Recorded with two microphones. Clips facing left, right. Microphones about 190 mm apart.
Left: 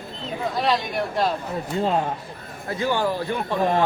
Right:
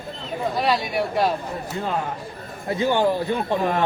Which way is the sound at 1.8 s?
25° left (ahead or behind).